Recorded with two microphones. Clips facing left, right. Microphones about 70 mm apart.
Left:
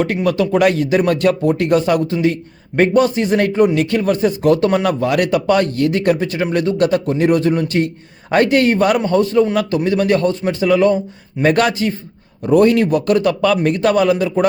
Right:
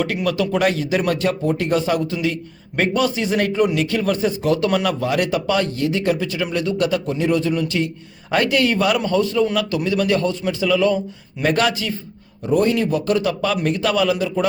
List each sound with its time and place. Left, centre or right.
0.0 s a man's voice: left
10.9 s a man's voice: left
11.5 s a man's voice: left
12.5 s speech: left